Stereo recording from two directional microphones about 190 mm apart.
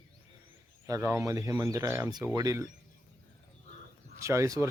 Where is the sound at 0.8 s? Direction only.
15° right (ahead or behind).